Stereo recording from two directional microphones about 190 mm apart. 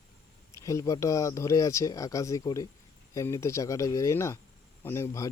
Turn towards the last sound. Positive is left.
turn(degrees=15)  # may be behind; listen again after turning